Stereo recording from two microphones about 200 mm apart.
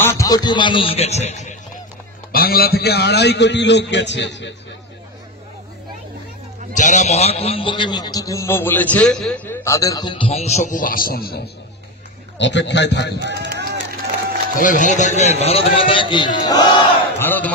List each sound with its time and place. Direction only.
0.0 s a man's voice: 15° left (ahead or behind); by 1.6 s 35° left (ahead or behind)
2.3 s a man's voice: 50° left (ahead or behind)
6.7 s a man's voice: 40° left (ahead or behind)
12.4 s a man's voice: 60° left (ahead or behind)
13.2 s speech: 60° right (ahead or behind)
14.6 s a man's voice: 40° left (ahead or behind); by 16.8 s 20° left (ahead or behind)
17.2 s a man's voice: 10° left (ahead or behind)